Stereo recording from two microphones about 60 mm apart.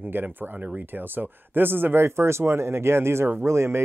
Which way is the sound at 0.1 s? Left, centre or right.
Right.